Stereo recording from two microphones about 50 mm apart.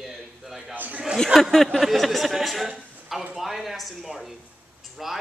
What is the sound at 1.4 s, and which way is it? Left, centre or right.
Speech, centre.